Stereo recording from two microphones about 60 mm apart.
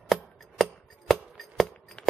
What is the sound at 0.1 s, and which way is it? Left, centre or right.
Chopping, centre.